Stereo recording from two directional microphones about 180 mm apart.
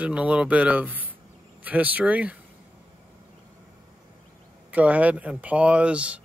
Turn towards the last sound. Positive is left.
turn(degrees=-5)  # may be behind; listen again after turning